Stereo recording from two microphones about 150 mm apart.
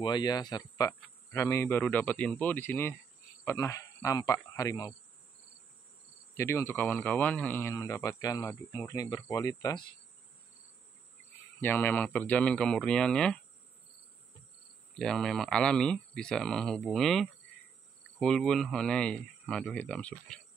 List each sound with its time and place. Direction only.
0.0 s speech: 30° left (ahead or behind)
6.3 s speech: 15° left (ahead or behind)
11.6 s speech: 15° left (ahead or behind)
15.0 s speech: 5° left (ahead or behind)